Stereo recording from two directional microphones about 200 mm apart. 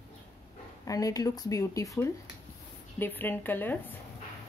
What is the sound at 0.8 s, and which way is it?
A woman's voice, 15° left (ahead or behind).